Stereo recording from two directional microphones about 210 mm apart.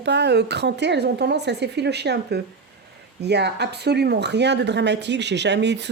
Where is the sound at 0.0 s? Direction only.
55° right (ahead or behind).